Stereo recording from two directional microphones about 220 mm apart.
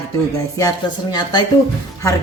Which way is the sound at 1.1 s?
20° left (ahead or behind).